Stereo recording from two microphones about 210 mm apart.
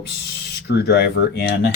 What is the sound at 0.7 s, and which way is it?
Speech, 50° left (ahead or behind).